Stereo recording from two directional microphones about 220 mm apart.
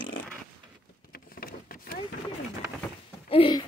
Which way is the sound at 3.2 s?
25° left (ahead or behind).